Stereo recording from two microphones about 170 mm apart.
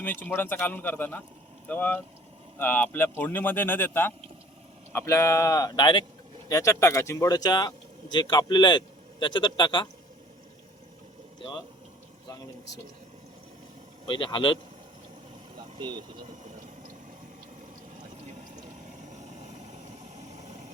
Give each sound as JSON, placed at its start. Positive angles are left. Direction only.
{"t": 0.3, "sound": "speech", "side_deg": 15}
{"t": 6.5, "sound": "a man's voice", "side_deg": 20}
{"t": 14.1, "sound": "a man's voice", "side_deg": 30}
{"t": 15.8, "sound": "speech", "side_deg": -25}